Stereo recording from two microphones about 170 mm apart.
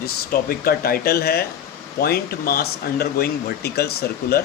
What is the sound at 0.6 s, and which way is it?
Speech, 60° left (ahead or behind).